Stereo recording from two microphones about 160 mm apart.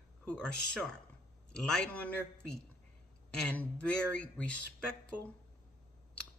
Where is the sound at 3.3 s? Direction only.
10° left (ahead or behind).